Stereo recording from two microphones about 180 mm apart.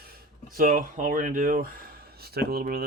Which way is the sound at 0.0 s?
55° right (ahead or behind).